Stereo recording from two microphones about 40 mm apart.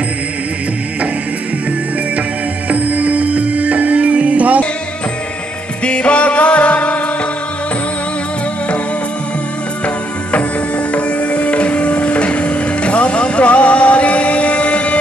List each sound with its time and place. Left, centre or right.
2.7 s music: right
5.9 s music: left
10.9 s music: left